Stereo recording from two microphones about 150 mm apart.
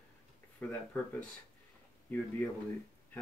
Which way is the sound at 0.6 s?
10° left (ahead or behind).